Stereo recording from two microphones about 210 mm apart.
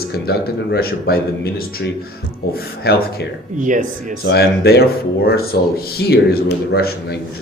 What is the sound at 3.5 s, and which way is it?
Speech, 40° right (ahead or behind).